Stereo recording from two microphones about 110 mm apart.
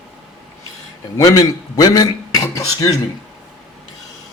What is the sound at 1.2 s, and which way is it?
Speech, 35° left (ahead or behind).